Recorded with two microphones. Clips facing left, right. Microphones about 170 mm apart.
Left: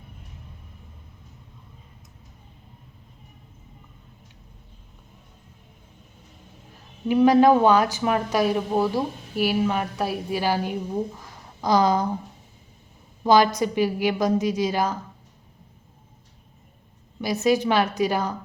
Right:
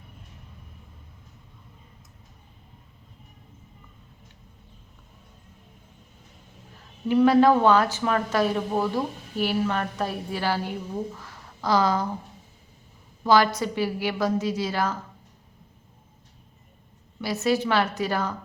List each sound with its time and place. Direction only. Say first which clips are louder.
7.1 s speech: left 2 dB; 15° left (ahead or behind)
13.2 s speech: left 2 dB; 15° left (ahead or behind)
17.2 s speech: left 3 dB; 15° left (ahead or behind)